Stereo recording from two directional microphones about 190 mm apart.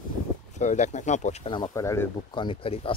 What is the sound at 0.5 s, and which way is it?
Speech, 40° left (ahead or behind).